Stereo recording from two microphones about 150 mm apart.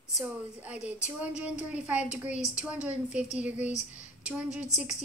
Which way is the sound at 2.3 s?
55° left (ahead or behind).